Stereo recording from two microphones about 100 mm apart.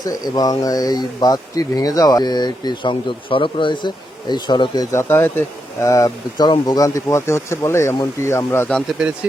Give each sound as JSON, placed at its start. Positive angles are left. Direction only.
{"t": 0.0, "sound": "speech", "side_deg": 40}
{"t": 4.9, "sound": "speech", "side_deg": 25}
{"t": 5.9, "sound": "speech", "side_deg": 35}
{"t": 9.0, "sound": "speech", "side_deg": -5}